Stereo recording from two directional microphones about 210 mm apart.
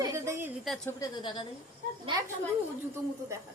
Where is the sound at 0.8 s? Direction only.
20° left (ahead or behind).